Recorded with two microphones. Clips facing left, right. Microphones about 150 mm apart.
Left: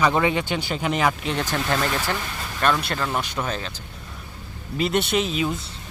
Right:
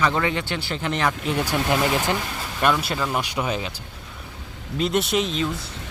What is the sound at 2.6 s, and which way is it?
Speech, 5° right (ahead or behind).